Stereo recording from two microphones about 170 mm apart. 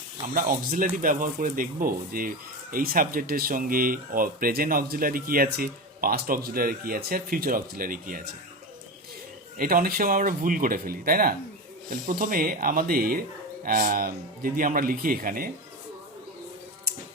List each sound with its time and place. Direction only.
0.3 s speech: 55° right (ahead or behind)
9.6 s speech: 60° right (ahead or behind)